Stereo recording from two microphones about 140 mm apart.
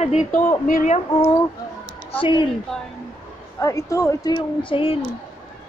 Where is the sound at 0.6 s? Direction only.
75° left (ahead or behind).